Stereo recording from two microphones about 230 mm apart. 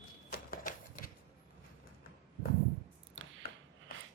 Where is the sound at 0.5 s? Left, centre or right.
Left.